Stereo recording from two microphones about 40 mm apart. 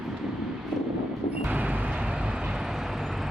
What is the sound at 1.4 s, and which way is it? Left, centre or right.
Vehicle, right.